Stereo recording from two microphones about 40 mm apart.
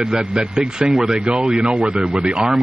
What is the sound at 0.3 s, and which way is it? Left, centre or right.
A man's voice, right.